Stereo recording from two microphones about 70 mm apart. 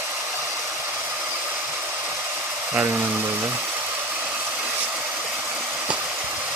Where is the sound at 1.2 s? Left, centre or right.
Right.